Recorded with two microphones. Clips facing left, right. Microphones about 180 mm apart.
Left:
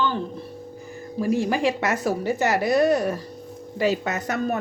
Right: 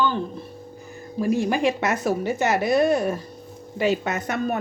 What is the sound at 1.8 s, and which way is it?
Speech, 20° right (ahead or behind).